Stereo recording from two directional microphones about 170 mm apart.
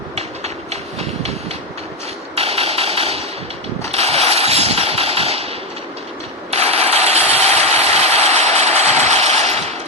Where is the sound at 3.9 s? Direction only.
35° right (ahead or behind).